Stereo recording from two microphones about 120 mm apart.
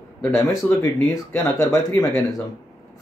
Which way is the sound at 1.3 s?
30° left (ahead or behind).